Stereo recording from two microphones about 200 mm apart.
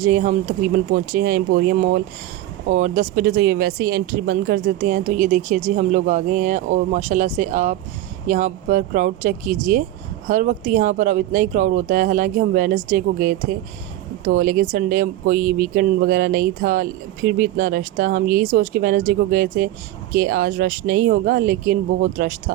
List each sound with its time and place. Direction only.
0.0 s speech: 45° right (ahead or behind)
15.4 s speech: 10° right (ahead or behind)
15.7 s speech: 45° right (ahead or behind)